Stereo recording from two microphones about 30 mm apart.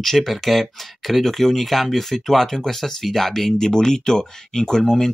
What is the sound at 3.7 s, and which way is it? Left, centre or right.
Speech, left.